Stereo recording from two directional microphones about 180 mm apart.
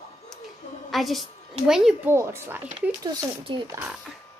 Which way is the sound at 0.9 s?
Centre (ahead or behind).